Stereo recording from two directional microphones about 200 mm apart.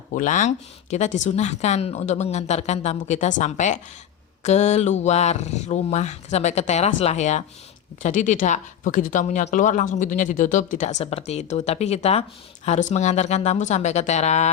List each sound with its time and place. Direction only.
0.1 s speech: 40° left (ahead or behind)